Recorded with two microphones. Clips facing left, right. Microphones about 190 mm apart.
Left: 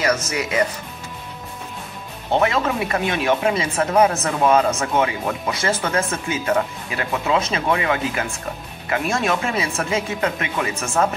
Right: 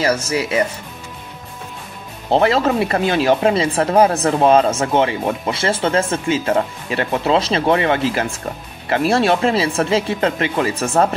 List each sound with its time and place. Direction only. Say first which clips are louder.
0.0 s speech: right 3 dB; 30° right (ahead or behind)
2.3 s speech: right 4 dB; 35° right (ahead or behind)